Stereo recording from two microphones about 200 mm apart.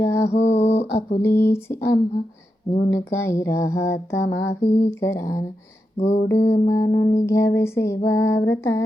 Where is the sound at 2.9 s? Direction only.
15° left (ahead or behind).